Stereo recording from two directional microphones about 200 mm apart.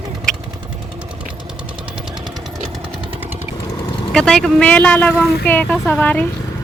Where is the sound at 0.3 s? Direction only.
5° left (ahead or behind).